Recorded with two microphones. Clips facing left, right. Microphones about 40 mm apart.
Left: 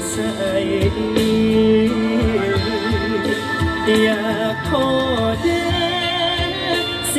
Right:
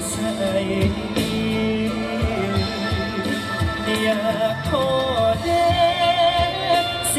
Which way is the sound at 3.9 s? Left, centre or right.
Left.